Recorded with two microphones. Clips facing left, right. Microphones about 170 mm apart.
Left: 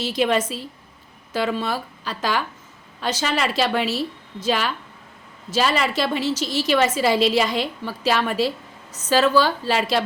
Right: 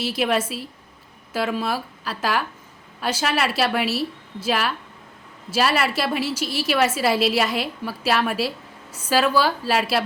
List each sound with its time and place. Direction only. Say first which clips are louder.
0.0 s a woman's voice: left 2 dB; 5° right (ahead or behind)